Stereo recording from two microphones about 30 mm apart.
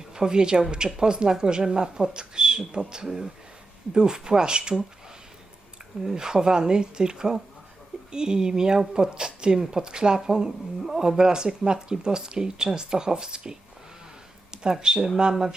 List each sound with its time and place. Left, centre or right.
0.1 s a woman's voice: right
6.1 s speech: right
14.9 s speech: centre